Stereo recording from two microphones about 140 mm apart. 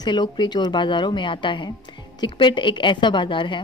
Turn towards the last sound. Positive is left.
turn(degrees=35)  # may be behind; listen again after turning